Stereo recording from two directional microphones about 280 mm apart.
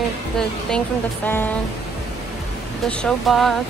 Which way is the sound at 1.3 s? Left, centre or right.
Centre.